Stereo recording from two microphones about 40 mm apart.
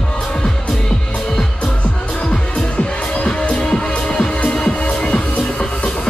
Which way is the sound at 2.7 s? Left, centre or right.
Left.